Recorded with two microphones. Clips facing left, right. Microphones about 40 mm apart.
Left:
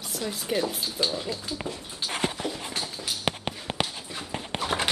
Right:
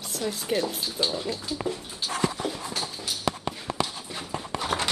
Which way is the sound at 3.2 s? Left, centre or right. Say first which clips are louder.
Right 2 dB; left.